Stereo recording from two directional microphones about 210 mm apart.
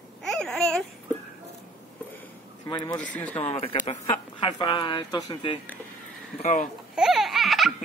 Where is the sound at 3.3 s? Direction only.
25° left (ahead or behind).